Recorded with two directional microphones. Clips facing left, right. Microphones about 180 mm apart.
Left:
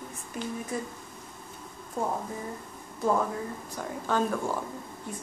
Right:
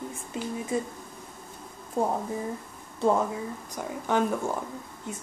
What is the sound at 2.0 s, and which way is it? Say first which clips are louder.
Speech: right 4 dB; 30° right (ahead or behind).